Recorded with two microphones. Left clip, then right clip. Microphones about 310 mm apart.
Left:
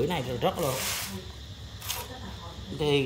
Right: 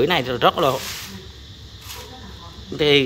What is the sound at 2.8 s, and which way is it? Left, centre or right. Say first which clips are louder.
Speech: right 10 dB; centre.